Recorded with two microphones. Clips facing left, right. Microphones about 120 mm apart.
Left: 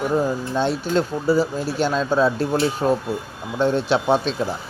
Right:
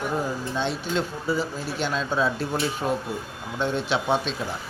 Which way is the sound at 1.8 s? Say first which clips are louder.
Left 6 dB; 40° left (ahead or behind).